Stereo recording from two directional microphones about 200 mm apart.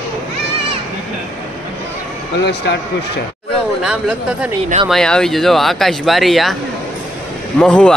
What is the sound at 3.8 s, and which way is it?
Speech, 5° right (ahead or behind).